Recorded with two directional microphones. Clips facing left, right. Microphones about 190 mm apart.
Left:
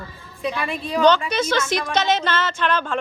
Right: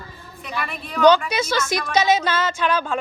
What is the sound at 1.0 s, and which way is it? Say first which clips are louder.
A woman's voice: right 2 dB; 10° right (ahead or behind).